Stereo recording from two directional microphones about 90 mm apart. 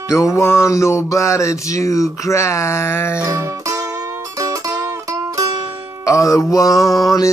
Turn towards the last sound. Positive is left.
turn(degrees=40)  # may be behind; listen again after turning